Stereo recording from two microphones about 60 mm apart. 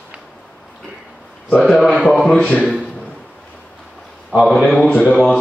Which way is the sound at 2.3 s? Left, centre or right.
Centre.